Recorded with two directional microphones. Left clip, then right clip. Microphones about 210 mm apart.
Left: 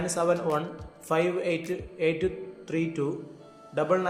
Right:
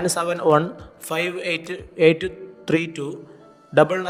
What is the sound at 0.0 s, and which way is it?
A man's voice, 45° right (ahead or behind).